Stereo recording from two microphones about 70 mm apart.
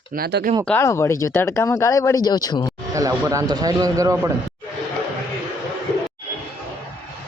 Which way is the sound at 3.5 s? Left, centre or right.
Right.